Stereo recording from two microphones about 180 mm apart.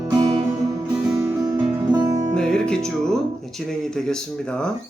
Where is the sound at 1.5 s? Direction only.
10° right (ahead or behind).